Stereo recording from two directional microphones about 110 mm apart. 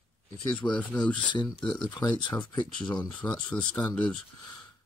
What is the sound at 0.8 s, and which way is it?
Speech, 15° left (ahead or behind).